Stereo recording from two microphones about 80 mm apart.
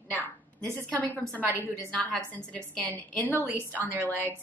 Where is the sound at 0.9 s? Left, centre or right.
Centre.